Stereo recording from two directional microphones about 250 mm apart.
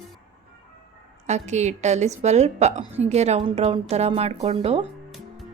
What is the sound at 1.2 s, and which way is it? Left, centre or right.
A woman's voice, right.